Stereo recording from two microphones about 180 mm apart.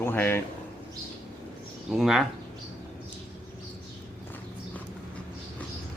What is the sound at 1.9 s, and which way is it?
Speech, centre (ahead or behind).